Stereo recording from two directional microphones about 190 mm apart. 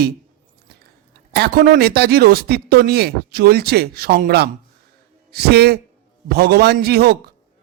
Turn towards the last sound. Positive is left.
turn(degrees=-55)  # may be behind; listen again after turning